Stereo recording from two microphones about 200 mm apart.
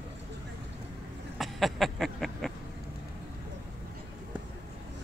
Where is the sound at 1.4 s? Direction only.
Centre (ahead or behind).